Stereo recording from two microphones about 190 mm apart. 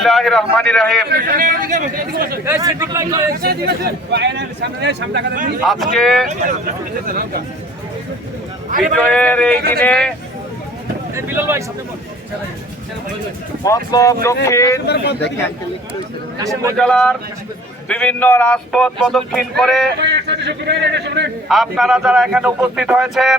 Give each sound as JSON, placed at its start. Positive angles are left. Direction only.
{"t": 0.0, "sound": "speech", "side_deg": 0}
{"t": 1.1, "sound": "speech", "side_deg": -50}
{"t": 2.4, "sound": "speech", "side_deg": -15}
{"t": 3.4, "sound": "speech", "side_deg": -55}
{"t": 5.6, "sound": "speech", "side_deg": 0}
{"t": 6.2, "sound": "speech", "side_deg": -45}
{"t": 9.0, "sound": "speech", "side_deg": 5}
{"t": 11.1, "sound": "speech", "side_deg": -10}
{"t": 13.7, "sound": "speech", "side_deg": 15}
{"t": 14.8, "sound": "speech", "side_deg": 60}
{"t": 16.4, "sound": "speech", "side_deg": -15}
{"t": 16.7, "sound": "speech", "side_deg": 5}
{"t": 20.0, "sound": "speech", "side_deg": -65}
{"t": 21.5, "sound": "speech", "side_deg": 0}